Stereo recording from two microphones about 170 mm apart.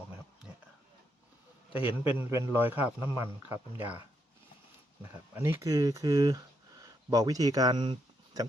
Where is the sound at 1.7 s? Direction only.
30° left (ahead or behind).